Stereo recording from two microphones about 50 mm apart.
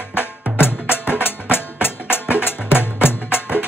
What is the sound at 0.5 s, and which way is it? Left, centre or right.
Music, left.